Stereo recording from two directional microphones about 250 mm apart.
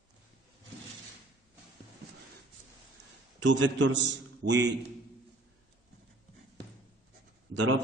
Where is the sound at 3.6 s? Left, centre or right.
Right.